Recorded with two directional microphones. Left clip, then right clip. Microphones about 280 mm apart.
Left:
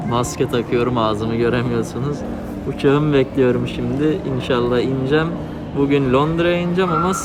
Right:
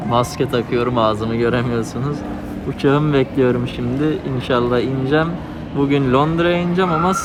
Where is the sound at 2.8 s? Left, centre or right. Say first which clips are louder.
Even; centre.